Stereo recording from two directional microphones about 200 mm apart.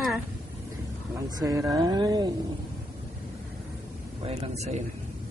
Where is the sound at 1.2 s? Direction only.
15° right (ahead or behind).